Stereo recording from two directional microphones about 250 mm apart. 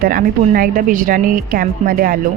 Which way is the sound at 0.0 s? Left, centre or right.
Right.